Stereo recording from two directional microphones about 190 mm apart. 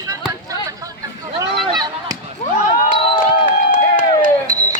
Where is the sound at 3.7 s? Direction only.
45° left (ahead or behind).